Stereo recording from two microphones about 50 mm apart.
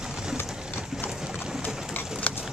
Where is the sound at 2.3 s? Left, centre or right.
Left.